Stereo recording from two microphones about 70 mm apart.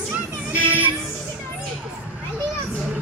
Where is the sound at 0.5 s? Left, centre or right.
Right.